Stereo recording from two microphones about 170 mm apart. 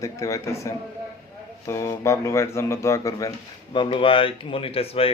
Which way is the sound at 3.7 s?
30° left (ahead or behind).